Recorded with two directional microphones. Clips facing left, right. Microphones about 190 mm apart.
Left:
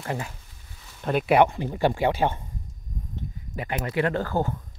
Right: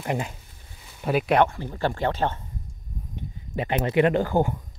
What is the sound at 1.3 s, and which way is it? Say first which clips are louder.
Speech: left 3 dB; 15° left (ahead or behind).